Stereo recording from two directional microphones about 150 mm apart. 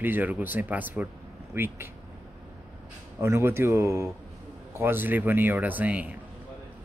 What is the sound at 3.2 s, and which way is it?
Speech, 15° right (ahead or behind).